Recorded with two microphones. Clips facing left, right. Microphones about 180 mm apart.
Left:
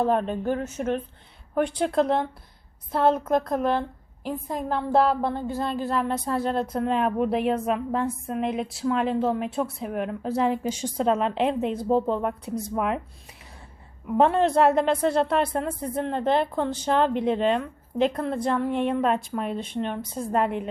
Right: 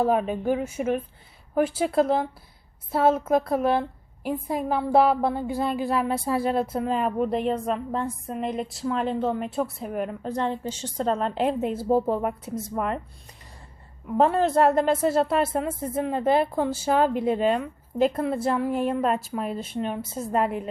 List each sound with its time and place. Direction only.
0.0 s a woman's voice: 5° right (ahead or behind)
14.1 s a woman's voice: centre (ahead or behind)